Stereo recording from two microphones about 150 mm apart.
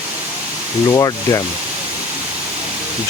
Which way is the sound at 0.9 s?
25° left (ahead or behind).